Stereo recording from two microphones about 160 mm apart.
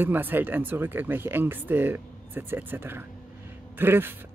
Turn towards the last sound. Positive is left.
turn(degrees=-15)  # may be behind; listen again after turning